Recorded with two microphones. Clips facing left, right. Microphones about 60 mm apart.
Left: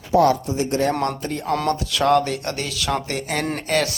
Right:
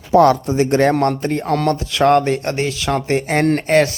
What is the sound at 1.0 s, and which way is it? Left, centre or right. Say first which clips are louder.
Speech: right 6 dB; right.